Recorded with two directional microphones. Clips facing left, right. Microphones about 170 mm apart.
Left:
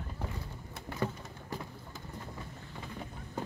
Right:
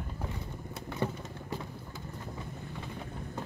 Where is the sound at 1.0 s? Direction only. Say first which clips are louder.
Right 1 dB; 25° right (ahead or behind).